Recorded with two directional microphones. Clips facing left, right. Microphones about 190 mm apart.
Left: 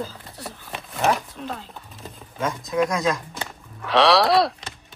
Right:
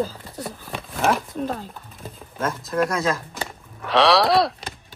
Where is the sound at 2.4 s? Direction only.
Centre (ahead or behind).